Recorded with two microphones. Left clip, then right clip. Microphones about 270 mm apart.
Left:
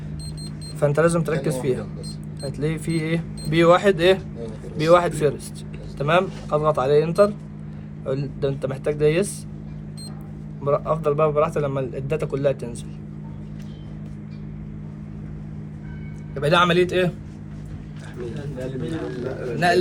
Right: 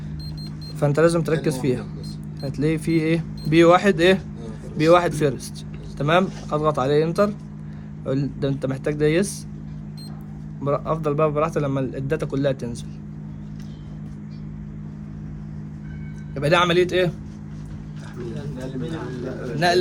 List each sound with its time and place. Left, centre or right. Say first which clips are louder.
0.8 s speech: right 1 dB; right
1.7 s speech: left 2 dB; centre
2.6 s speech: right 5 dB; right
8.4 s speech: left 1 dB; right
10.6 s speech: left 2 dB; right
16.3 s a man's voice: even; right
19.5 s speech: even; right